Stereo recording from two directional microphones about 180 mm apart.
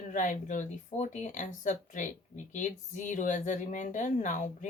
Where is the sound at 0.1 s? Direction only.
45° left (ahead or behind).